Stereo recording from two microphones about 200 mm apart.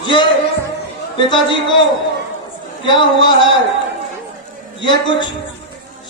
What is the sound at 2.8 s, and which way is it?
Speech, 25° left (ahead or behind).